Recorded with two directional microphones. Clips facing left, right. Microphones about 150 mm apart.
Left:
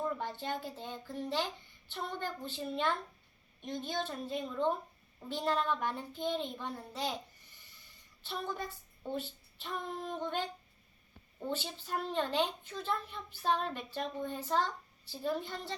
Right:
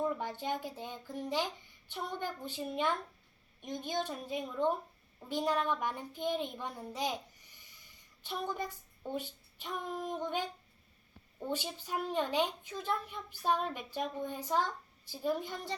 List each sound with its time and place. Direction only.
0.0 s a woman's voice: 10° right (ahead or behind)